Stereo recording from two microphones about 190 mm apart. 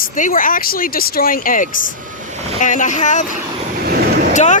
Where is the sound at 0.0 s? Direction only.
45° left (ahead or behind).